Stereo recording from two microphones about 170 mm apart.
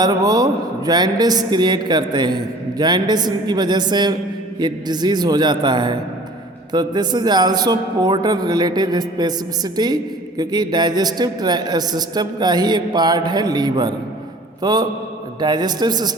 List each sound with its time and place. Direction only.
0.0 s a man's voice: 20° right (ahead or behind)